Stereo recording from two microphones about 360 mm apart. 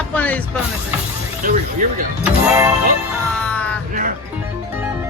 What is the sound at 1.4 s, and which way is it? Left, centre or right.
Speech, right.